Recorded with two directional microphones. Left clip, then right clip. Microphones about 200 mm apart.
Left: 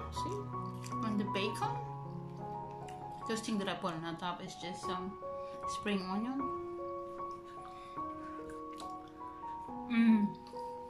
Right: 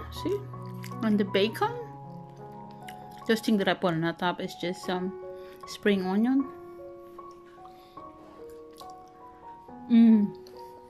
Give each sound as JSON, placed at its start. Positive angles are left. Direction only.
{"t": 0.1, "sound": "speech", "side_deg": -40}
{"t": 3.3, "sound": "speech", "side_deg": -45}
{"t": 9.8, "sound": "speech", "side_deg": -30}